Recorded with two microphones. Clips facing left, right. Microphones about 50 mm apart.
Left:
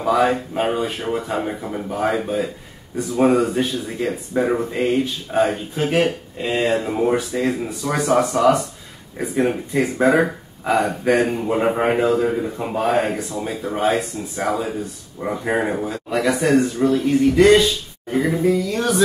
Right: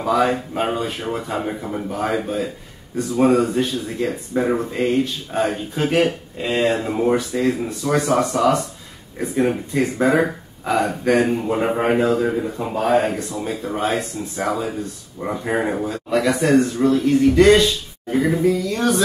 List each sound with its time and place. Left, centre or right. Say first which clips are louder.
0.0 s speech: left 1 dB; centre